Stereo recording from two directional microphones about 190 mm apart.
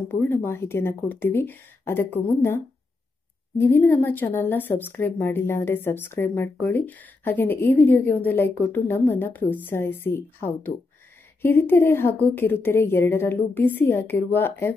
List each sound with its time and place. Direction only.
0.1 s a woman's voice: 10° left (ahead or behind)